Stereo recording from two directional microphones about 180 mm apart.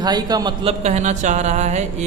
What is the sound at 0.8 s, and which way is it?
Speech, 40° right (ahead or behind).